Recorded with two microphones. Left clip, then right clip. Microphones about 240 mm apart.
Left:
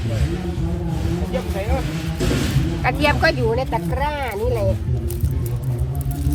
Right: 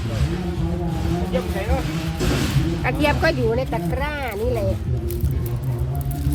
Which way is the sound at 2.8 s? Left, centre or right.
Left.